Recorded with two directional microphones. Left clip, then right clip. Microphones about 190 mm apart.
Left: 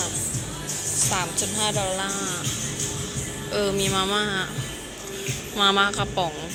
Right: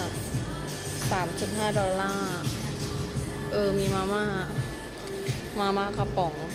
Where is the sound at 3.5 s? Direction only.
Centre (ahead or behind).